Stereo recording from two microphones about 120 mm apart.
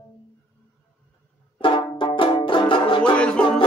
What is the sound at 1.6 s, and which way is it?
Banjo, 45° left (ahead or behind).